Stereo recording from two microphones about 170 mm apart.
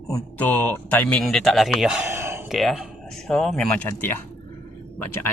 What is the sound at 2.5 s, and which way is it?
Speech, centre (ahead or behind).